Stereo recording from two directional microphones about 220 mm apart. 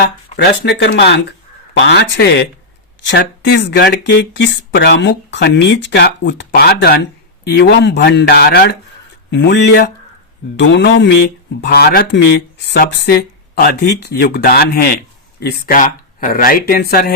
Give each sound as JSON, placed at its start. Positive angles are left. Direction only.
{"t": 0.3, "sound": "speech", "side_deg": 50}